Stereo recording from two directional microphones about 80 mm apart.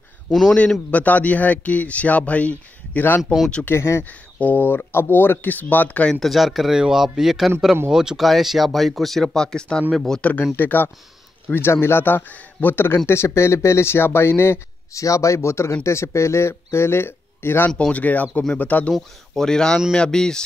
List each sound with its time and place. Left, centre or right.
0.3 s speech: centre
0.9 s a man's voice: centre
3.6 s speech: left
4.0 s a man's voice: left
6.1 s speech: centre
10.5 s a man's voice: left
17.7 s a man's voice: centre
18.9 s speech: centre